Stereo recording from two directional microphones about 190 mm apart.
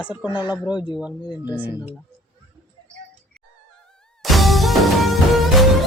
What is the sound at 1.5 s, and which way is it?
Speech, 10° right (ahead or behind).